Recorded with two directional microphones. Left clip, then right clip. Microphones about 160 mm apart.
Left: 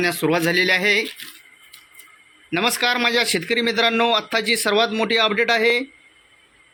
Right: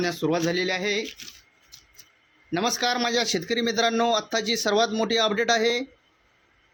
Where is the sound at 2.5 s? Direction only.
25° right (ahead or behind).